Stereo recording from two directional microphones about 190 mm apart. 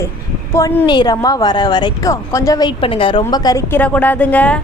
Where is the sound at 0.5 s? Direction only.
15° left (ahead or behind).